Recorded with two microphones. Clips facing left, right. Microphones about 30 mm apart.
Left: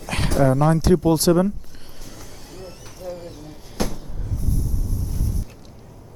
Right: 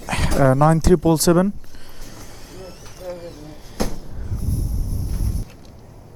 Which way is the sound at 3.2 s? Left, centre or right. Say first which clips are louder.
Right 1 dB; centre.